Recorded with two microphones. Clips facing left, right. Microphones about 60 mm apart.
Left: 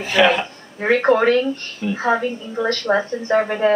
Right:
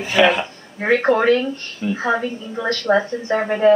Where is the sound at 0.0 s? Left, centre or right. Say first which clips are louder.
Even; centre.